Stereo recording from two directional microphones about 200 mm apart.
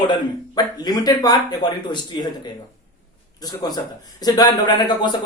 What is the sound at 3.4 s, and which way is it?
Speech, 20° left (ahead or behind).